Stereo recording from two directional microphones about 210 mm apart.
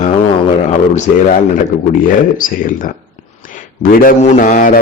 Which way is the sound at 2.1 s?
40° left (ahead or behind).